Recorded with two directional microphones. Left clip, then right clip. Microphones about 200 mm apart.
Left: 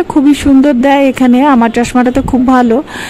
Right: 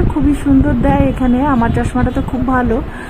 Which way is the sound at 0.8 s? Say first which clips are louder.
Left 6 dB; 60° left (ahead or behind).